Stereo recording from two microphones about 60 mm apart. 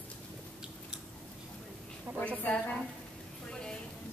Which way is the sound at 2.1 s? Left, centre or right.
Right.